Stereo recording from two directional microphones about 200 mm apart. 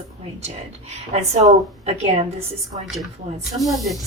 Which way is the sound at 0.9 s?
35° right (ahead or behind).